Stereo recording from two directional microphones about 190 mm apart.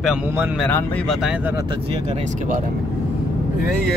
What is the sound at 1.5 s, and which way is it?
Speech, 25° right (ahead or behind).